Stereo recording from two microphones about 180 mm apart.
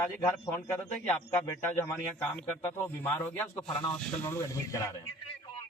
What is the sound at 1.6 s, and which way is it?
Speech, 10° left (ahead or behind).